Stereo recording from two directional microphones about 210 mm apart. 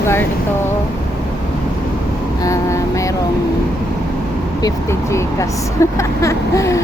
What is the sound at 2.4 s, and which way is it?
Vehicle, 15° left (ahead or behind).